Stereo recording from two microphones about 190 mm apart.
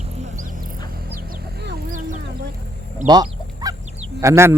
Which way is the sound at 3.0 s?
20° right (ahead or behind).